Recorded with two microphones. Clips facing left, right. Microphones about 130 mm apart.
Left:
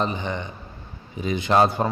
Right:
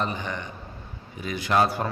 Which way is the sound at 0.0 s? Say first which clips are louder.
Left 3 dB; 20° left (ahead or behind).